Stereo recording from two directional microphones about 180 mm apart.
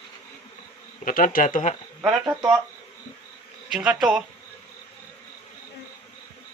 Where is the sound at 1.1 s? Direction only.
50° left (ahead or behind).